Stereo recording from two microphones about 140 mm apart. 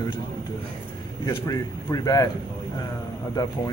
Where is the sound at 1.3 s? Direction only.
25° left (ahead or behind).